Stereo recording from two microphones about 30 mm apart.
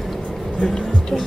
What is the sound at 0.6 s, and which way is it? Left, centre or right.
Music, left.